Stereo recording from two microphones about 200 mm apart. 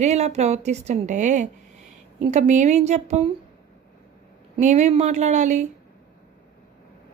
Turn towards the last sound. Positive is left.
turn(degrees=-35)  # may be behind; listen again after turning